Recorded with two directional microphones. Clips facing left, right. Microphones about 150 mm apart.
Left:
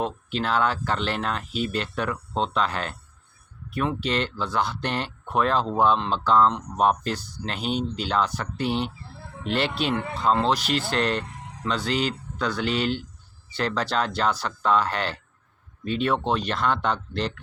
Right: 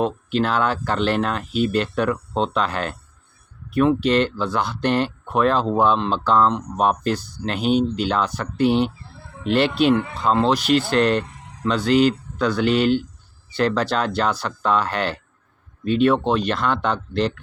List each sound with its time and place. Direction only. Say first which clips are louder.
0.0 s speech: right 6 dB; 55° right (ahead or behind)